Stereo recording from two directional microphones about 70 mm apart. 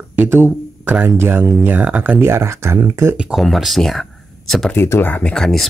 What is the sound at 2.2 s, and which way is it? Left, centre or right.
Speech, right.